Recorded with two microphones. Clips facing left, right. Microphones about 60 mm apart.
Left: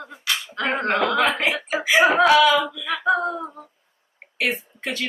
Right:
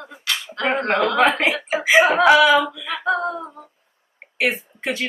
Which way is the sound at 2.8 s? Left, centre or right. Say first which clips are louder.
Left 1 dB; centre.